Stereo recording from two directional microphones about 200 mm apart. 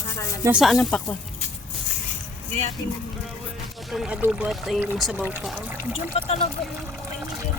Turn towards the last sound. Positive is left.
turn(degrees=25)  # may be behind; listen again after turning